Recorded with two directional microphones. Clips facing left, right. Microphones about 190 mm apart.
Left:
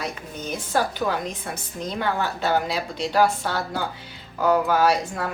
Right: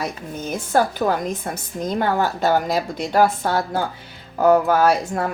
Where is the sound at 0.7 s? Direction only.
45° right (ahead or behind).